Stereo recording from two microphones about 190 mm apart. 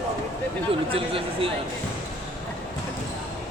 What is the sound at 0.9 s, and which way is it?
Speech, 30° right (ahead or behind).